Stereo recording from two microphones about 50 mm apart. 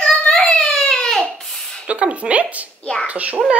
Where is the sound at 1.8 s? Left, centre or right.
Right.